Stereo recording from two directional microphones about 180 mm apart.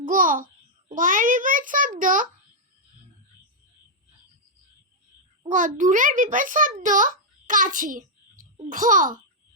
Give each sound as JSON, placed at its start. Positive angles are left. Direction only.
{"t": 0.0, "sound": "a child's voice", "side_deg": -50}
{"t": 5.5, "sound": "a child's voice", "side_deg": -45}